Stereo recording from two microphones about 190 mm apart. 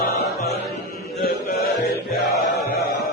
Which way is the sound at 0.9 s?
55° left (ahead or behind).